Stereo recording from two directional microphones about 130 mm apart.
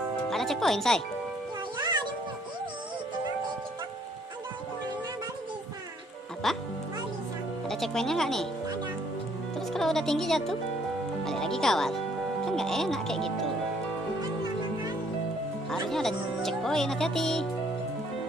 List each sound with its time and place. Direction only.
0.3 s speech: centre (ahead or behind)
1.8 s music: 35° right (ahead or behind)
6.4 s speech: centre (ahead or behind)
7.6 s speech: 5° left (ahead or behind)
9.6 s speech: centre (ahead or behind)
15.9 s speech: 5° left (ahead or behind)